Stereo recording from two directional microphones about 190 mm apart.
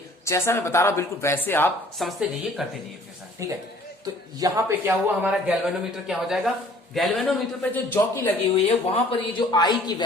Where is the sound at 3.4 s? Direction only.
15° right (ahead or behind); by 8.3 s 10° left (ahead or behind).